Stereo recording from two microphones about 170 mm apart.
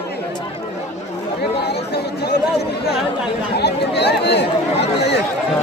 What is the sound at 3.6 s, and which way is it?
Speech, 80° left.